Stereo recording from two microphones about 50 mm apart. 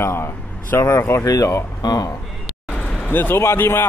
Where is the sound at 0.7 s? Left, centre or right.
Left.